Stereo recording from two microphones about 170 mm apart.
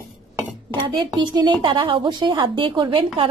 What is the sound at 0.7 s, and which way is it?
A woman's voice, 25° right (ahead or behind).